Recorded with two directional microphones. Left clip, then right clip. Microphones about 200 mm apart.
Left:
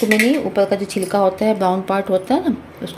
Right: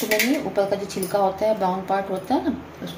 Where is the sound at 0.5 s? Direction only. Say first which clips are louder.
Left 5 dB; 60° left (ahead or behind).